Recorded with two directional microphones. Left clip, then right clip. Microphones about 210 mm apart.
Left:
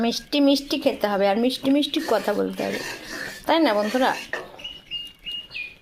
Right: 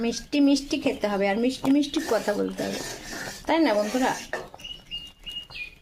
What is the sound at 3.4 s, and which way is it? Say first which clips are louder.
Speech: left 3 dB; 20° left (ahead or behind).